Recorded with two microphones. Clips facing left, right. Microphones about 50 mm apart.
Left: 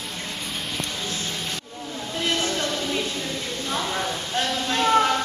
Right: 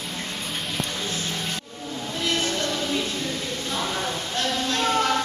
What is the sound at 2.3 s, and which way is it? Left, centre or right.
Music, left.